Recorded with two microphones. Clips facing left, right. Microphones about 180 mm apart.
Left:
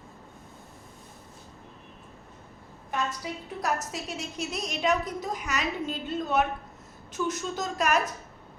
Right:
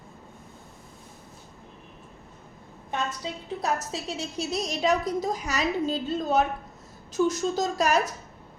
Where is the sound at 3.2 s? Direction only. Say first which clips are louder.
Right 2 dB; 25° right (ahead or behind).